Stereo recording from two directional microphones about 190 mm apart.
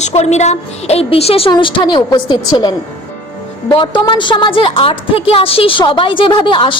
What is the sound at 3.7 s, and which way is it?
A woman's voice, 25° left (ahead or behind).